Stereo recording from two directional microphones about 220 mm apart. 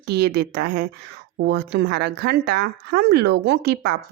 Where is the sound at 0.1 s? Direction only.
45° right (ahead or behind).